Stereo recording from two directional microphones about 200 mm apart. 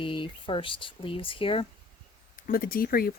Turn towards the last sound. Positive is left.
turn(degrees=45)  # may be behind; listen again after turning